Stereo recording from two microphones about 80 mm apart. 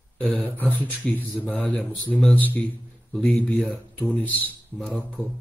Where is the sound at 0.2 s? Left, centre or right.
Centre.